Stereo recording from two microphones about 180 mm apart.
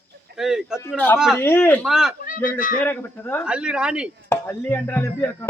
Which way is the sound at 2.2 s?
50° left (ahead or behind).